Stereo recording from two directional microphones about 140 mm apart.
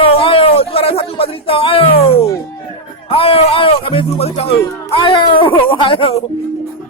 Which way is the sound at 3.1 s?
45° left (ahead or behind).